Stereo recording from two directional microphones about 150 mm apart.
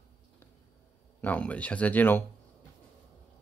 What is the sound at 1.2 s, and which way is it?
Speech, 10° left (ahead or behind).